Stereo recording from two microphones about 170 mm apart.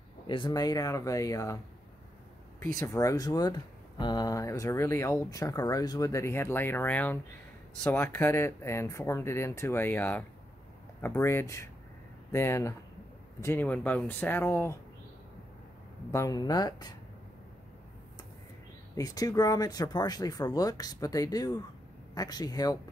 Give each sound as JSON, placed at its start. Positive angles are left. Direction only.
{"t": 0.3, "sound": "speech", "side_deg": 25}
{"t": 2.8, "sound": "speech", "side_deg": 20}
{"t": 16.1, "sound": "speech", "side_deg": 20}
{"t": 18.9, "sound": "speech", "side_deg": 20}